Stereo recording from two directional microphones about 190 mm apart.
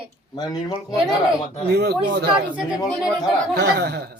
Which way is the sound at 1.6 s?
60° right (ahead or behind).